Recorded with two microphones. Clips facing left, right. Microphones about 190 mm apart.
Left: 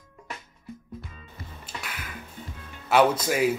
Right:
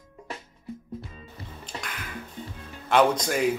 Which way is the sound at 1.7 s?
30° right (ahead or behind).